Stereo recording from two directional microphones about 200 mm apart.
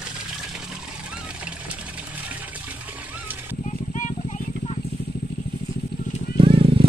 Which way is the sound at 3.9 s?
40° left (ahead or behind).